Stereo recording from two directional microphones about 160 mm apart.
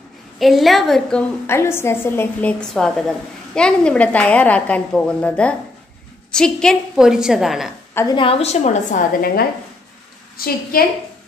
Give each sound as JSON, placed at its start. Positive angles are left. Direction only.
{"t": 0.4, "sound": "a woman's voice", "side_deg": 0}
{"t": 1.5, "sound": "a woman's voice", "side_deg": 15}
{"t": 7.9, "sound": "a woman's voice", "side_deg": 20}
{"t": 8.2, "sound": "a woman's voice", "side_deg": 40}
{"t": 9.2, "sound": "a woman's voice", "side_deg": 70}